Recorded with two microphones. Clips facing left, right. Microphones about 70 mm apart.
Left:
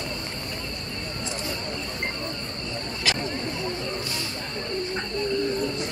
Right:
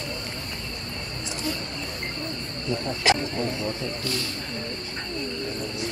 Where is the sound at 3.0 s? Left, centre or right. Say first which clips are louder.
Right 6 dB; right.